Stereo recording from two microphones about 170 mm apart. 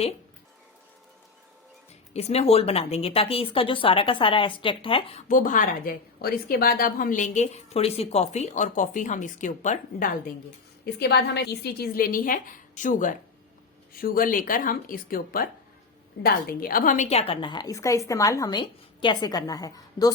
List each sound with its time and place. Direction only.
2.1 s a woman's voice: 40° left (ahead or behind)
5.3 s a woman's voice: 50° left (ahead or behind)
11.0 s a woman's voice: 75° left (ahead or behind); by 20.1 s 20° left (ahead or behind)